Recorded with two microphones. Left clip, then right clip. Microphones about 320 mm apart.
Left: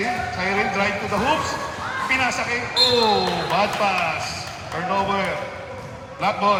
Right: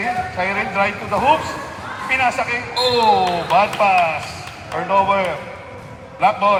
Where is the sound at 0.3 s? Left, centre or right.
Right.